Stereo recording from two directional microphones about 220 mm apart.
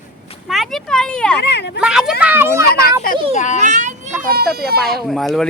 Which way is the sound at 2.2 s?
10° right (ahead or behind).